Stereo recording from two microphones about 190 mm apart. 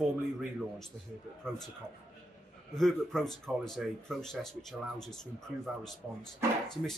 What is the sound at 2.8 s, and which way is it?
Speech, centre (ahead or behind).